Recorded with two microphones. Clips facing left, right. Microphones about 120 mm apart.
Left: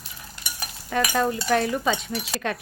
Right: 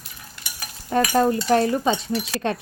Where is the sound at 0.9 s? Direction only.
35° right (ahead or behind).